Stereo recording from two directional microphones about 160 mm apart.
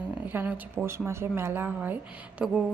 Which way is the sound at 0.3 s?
10° right (ahead or behind).